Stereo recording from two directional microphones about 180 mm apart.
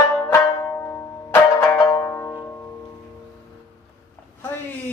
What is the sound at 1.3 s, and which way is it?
Music, 10° left (ahead or behind).